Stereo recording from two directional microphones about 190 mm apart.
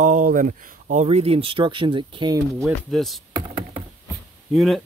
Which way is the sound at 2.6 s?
Centre (ahead or behind).